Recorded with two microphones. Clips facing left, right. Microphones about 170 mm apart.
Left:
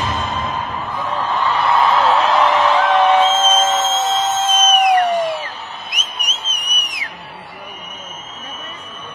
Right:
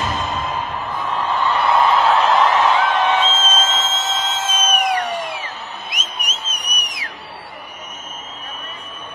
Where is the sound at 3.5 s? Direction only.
50° left (ahead or behind).